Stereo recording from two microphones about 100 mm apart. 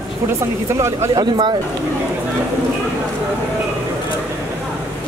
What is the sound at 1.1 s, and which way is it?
Speech, 45° right (ahead or behind).